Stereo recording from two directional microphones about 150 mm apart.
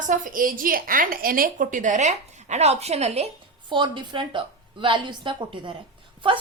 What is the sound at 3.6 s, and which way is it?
A woman's voice, 30° right (ahead or behind).